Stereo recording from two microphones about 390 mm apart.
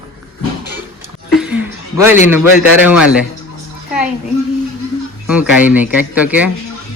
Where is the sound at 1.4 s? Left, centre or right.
Centre.